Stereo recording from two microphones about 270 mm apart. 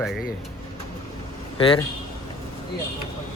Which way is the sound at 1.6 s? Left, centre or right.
Centre.